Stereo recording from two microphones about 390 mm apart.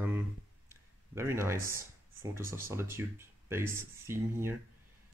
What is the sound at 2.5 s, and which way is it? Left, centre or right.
Speech, centre.